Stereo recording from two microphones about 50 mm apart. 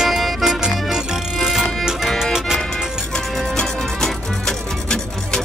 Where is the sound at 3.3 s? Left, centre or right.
Centre.